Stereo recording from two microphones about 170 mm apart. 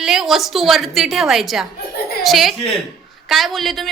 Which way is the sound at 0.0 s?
Centre (ahead or behind).